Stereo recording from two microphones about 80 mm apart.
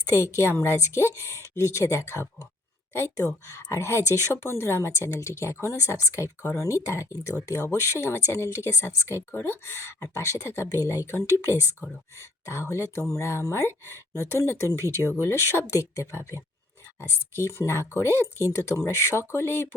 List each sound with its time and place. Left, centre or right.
0.0 s speech: left
3.7 s speech: left